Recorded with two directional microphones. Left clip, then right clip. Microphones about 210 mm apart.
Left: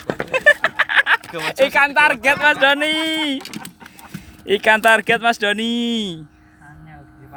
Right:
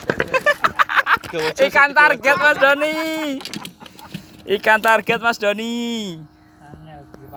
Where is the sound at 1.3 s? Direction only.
35° left (ahead or behind).